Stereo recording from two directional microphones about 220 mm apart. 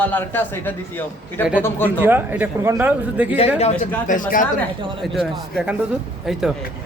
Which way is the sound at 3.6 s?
30° left (ahead or behind).